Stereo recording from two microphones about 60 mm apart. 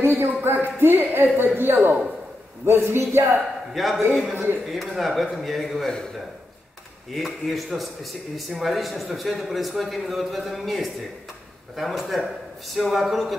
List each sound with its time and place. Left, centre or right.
0.0 s speech: right
2.6 s speech: right
3.7 s a man's voice: centre
4.0 s speech: right
4.6 s a man's voice: centre
7.1 s a man's voice: centre